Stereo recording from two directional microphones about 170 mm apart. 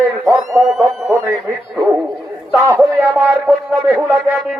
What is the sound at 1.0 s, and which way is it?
Speech, 15° right (ahead or behind).